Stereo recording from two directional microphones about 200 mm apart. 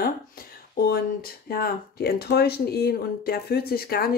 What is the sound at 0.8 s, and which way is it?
Speech, 50° left (ahead or behind).